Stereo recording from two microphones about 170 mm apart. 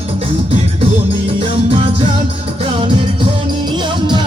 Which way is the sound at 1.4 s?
30° right (ahead or behind).